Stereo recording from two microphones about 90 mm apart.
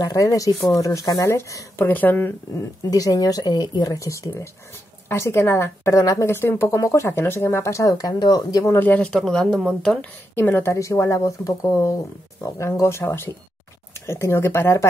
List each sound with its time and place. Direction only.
0.0 s speech: 40° left (ahead or behind)
1.2 s speech: 30° left (ahead or behind)
2.9 s speech: 40° left (ahead or behind)
8.7 s speech: 20° left (ahead or behind)
9.1 s speech: 5° left (ahead or behind)
10.3 s speech: 25° left (ahead or behind)